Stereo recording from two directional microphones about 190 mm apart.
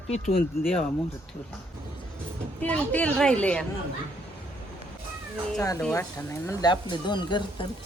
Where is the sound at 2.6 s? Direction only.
5° left (ahead or behind).